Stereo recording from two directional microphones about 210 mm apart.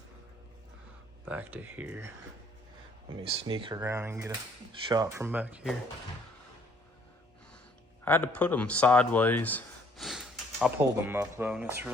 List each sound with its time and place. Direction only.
1.2 s speech: 5° right (ahead or behind)
3.2 s speech: 25° right (ahead or behind); by 5.7 s 5° right (ahead or behind)
8.0 s speech: 10° left (ahead or behind); by 11.9 s 10° right (ahead or behind)